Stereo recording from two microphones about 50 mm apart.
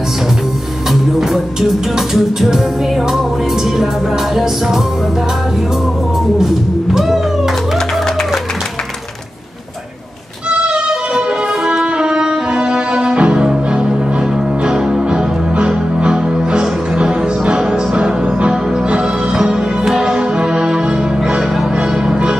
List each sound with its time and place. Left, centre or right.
2.1 s music: centre
6.3 s music: centre
11.1 s music: centre